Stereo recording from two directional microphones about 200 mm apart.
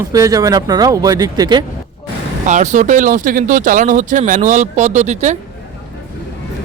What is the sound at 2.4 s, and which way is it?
Speech, 35° right (ahead or behind).